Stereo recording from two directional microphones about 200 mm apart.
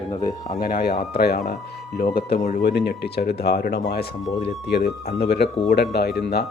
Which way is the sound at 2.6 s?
55° left (ahead or behind).